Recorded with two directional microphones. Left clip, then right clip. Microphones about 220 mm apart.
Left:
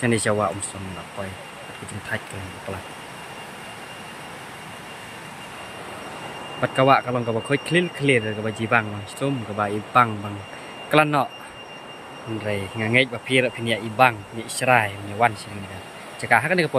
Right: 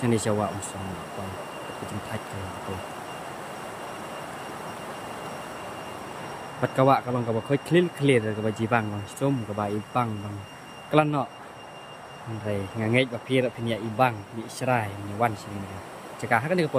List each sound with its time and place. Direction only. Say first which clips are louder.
0.0 s speech: left 4 dB; 5° right (ahead or behind)
6.6 s speech: left 4 dB; 5° right (ahead or behind)
12.5 s speech: left 3 dB; 5° right (ahead or behind)
16.3 s speech: left 5 dB; 5° right (ahead or behind)